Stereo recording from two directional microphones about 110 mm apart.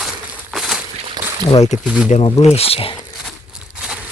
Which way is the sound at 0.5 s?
5° right (ahead or behind).